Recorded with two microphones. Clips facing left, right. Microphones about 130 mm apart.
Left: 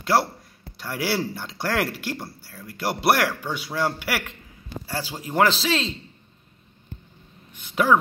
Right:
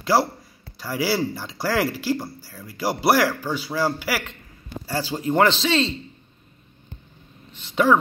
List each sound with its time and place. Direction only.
0.0 s a man's voice: centre (ahead or behind)
7.6 s a man's voice: centre (ahead or behind)